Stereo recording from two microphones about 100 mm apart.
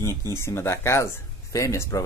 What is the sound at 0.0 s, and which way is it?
Speech, 30° left (ahead or behind).